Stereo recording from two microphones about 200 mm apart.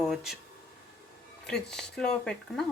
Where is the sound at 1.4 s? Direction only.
5° left (ahead or behind).